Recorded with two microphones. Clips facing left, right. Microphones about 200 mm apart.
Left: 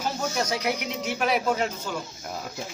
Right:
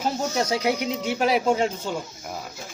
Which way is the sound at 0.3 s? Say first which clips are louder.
Right 5 dB; 30° right (ahead or behind).